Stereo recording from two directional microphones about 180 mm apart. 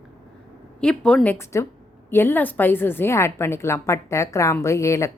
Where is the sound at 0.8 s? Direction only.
5° left (ahead or behind).